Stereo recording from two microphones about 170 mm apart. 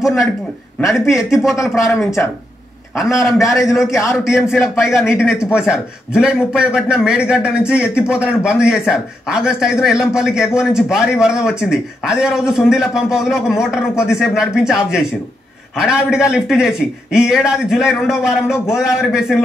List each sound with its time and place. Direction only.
0.0 s a man's voice: centre (ahead or behind)
0.9 s speech: 15° left (ahead or behind)
1.3 s a man's voice: 5° right (ahead or behind)
1.9 s speech: 15° left (ahead or behind)
3.0 s a man's voice: centre (ahead or behind)
5.1 s speech: 15° left (ahead or behind)
5.4 s a man's voice: 5° right (ahead or behind)